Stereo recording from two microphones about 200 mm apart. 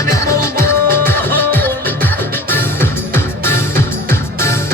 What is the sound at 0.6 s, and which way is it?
Music, 10° left (ahead or behind).